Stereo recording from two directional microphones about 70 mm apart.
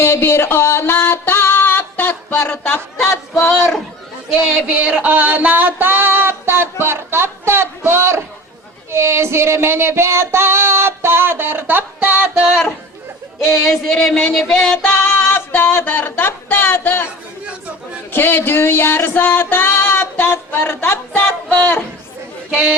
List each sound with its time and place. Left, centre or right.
0.0 s music: left
4.7 s a sound: centre
13.5 s music: centre
14.8 s a sound: left
18.1 s music: left
21.1 s speech: left